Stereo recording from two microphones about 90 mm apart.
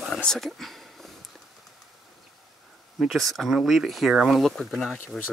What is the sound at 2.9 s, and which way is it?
Speech, centre (ahead or behind).